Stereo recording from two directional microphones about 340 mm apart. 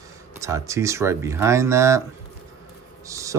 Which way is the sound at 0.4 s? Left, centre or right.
Centre.